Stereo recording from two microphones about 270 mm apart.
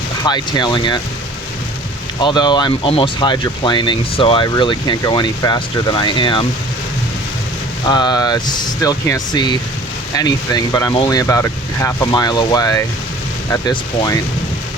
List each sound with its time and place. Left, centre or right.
0.2 s speech: centre
2.2 s speech: centre
7.9 s speech: centre